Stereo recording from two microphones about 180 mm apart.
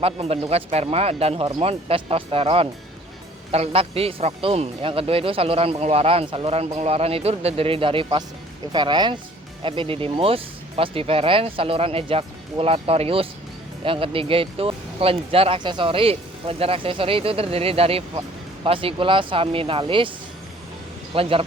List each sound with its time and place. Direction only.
0.0 s speech: 35° right (ahead or behind)
21.2 s speech: 30° right (ahead or behind)